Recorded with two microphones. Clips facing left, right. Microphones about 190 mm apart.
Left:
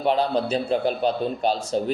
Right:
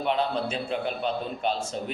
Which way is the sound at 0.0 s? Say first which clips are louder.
Left 5 dB; 35° left (ahead or behind).